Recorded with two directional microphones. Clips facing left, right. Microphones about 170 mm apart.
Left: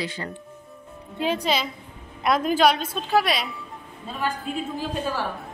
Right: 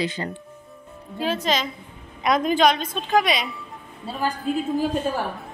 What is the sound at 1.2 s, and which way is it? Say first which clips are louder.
A woman's voice: even; 15° left (ahead or behind).